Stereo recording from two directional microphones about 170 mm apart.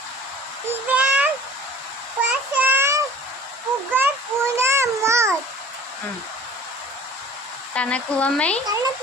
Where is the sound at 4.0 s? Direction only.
10° right (ahead or behind).